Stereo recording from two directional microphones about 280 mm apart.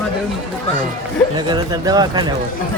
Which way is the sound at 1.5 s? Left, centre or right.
Centre.